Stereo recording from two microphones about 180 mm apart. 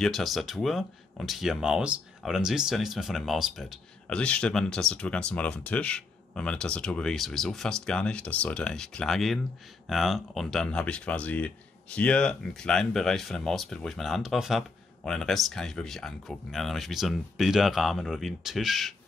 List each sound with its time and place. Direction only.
0.0 s speech: centre (ahead or behind)